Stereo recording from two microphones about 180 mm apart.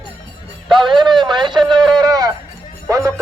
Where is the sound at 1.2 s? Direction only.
25° right (ahead or behind).